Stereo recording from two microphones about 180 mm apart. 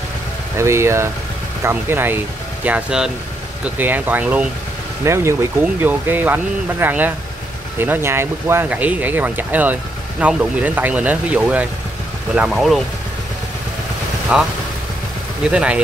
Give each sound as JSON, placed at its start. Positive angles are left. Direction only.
{"t": 0.6, "sound": "speech", "side_deg": -15}
{"t": 14.3, "sound": "speech", "side_deg": -5}
{"t": 15.5, "sound": "speech", "side_deg": -5}